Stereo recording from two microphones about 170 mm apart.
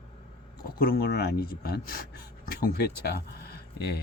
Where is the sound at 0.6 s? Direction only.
65° left (ahead or behind).